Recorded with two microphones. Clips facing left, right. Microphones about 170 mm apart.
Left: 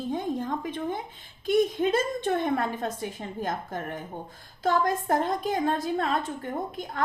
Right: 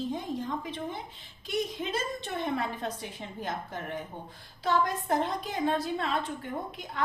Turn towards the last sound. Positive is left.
turn(degrees=45)  # may be behind; listen again after turning